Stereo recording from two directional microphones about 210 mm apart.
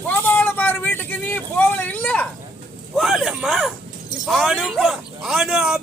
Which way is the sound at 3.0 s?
Centre (ahead or behind).